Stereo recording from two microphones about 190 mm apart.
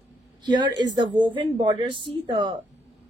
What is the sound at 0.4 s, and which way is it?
A woman's voice, 20° right (ahead or behind).